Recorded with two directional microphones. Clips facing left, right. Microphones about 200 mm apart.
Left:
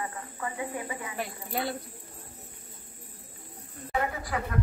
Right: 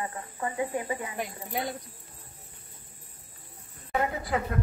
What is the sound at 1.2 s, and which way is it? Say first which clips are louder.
Speech: even; 15° right (ahead or behind).